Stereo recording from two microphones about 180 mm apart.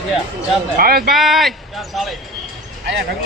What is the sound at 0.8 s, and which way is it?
Speech, 55° right (ahead or behind).